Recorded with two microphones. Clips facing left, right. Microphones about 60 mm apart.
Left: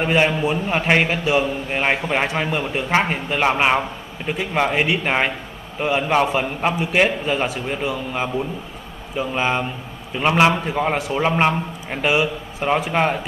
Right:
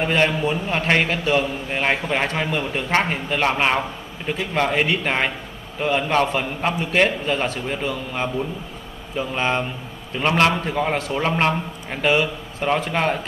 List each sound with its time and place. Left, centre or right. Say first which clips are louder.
0.0 s a man's voice: left 1 dB; centre